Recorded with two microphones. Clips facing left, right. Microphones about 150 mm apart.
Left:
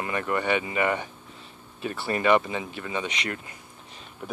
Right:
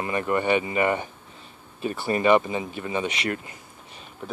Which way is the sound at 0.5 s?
30° right (ahead or behind).